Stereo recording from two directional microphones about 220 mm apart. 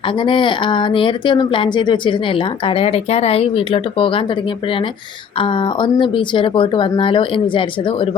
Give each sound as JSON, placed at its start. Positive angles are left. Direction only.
{"t": 0.2, "sound": "speech", "side_deg": 20}
{"t": 5.4, "sound": "speech", "side_deg": 20}